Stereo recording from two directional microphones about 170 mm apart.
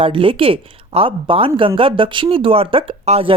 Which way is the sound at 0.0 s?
30° right (ahead or behind).